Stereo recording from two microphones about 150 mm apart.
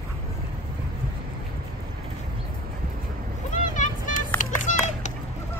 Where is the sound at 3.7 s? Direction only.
60° left (ahead or behind).